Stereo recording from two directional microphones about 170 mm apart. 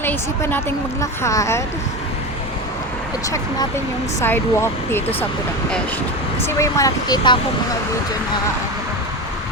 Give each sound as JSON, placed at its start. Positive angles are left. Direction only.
{"t": 0.0, "sound": "a woman's voice", "side_deg": 10}
{"t": 3.2, "sound": "speech", "side_deg": 20}
{"t": 6.4, "sound": "speech", "side_deg": 20}